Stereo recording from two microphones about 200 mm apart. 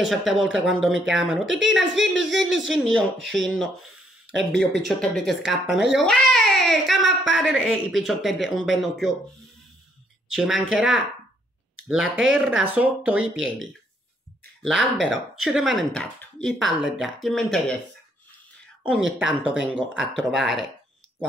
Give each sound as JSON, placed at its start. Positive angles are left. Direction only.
{"t": 0.0, "sound": "speech", "side_deg": 0}
{"t": 4.8, "sound": "speech", "side_deg": 0}
{"t": 10.3, "sound": "speech", "side_deg": 0}
{"t": 14.6, "sound": "speech", "side_deg": 0}
{"t": 18.8, "sound": "speech", "side_deg": -5}